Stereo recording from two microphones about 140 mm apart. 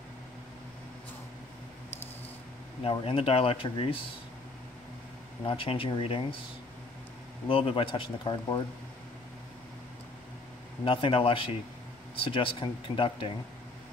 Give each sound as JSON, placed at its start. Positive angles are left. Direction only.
{"t": 2.8, "sound": "speech", "side_deg": 40}
{"t": 5.4, "sound": "speech", "side_deg": 40}
{"t": 7.4, "sound": "speech", "side_deg": 40}
{"t": 10.9, "sound": "speech", "side_deg": 40}